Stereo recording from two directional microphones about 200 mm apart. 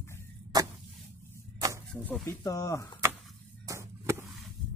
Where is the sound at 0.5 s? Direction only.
20° right (ahead or behind).